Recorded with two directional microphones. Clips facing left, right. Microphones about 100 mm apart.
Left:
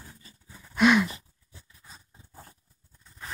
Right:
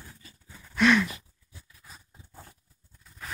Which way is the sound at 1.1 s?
30° left (ahead or behind).